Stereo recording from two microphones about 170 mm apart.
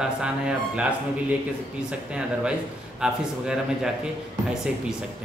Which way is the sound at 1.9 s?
5° right (ahead or behind).